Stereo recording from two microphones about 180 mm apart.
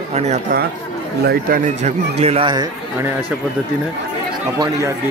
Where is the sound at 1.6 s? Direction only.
40° right (ahead or behind); by 3.2 s 20° right (ahead or behind).